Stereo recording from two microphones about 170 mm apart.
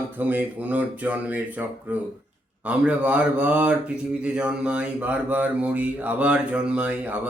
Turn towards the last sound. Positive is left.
turn(degrees=-10)  # may be behind; listen again after turning